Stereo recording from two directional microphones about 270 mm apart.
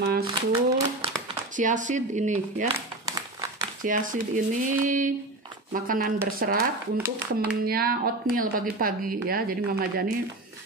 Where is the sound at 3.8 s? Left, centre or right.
Right.